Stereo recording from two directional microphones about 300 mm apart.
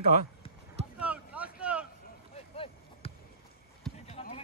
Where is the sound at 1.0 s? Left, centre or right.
Centre.